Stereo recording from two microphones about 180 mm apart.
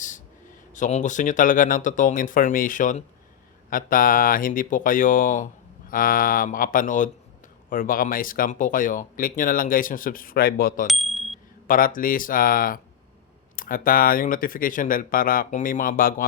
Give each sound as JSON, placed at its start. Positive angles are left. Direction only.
{"t": 0.7, "sound": "speech", "side_deg": 40}
{"t": 10.8, "sound": "bicycle bell", "side_deg": 0}
{"t": 11.7, "sound": "speech", "side_deg": 50}